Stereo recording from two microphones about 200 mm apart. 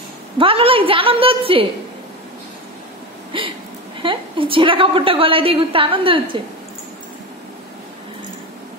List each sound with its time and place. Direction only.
0.4 s a woman's voice: 25° right (ahead or behind)
3.3 s a woman's voice: 25° right (ahead or behind)